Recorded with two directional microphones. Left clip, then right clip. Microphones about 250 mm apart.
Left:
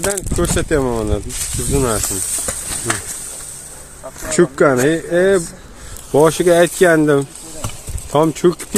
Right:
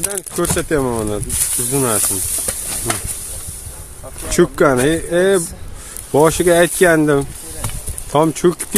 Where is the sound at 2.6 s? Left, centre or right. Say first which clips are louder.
Left 1 dB; right.